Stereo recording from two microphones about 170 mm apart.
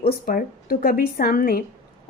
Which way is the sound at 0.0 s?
60° left (ahead or behind).